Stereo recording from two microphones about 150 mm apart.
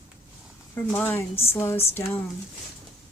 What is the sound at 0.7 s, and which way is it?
Speech, 15° left (ahead or behind).